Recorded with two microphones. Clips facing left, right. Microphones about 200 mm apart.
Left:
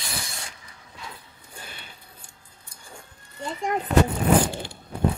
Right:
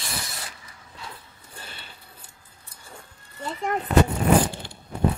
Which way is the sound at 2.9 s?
5° right (ahead or behind).